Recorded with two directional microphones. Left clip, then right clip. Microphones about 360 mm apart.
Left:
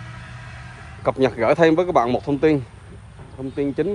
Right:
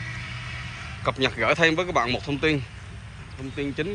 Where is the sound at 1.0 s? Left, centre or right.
Centre.